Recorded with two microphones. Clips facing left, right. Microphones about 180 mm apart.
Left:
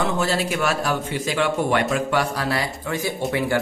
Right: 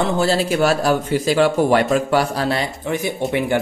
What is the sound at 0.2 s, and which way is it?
A man's voice, 30° right (ahead or behind).